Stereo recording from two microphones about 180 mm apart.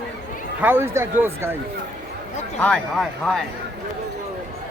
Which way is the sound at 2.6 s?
5° left (ahead or behind).